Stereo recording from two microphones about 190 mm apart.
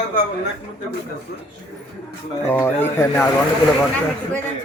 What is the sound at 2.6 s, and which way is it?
Speech, 15° left (ahead or behind).